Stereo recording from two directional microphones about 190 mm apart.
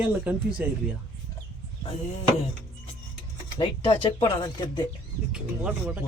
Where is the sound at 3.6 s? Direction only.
25° left (ahead or behind).